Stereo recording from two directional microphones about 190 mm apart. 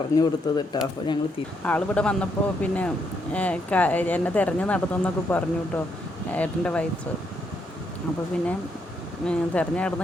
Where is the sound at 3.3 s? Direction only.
5° left (ahead or behind).